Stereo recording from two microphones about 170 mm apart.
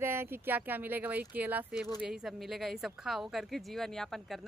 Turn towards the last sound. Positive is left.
turn(degrees=0)  # may be behind; listen again after turning